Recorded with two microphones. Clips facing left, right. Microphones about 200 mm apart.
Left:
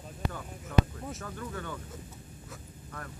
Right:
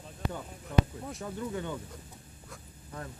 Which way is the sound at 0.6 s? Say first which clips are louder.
Left 1 dB; centre (ahead or behind).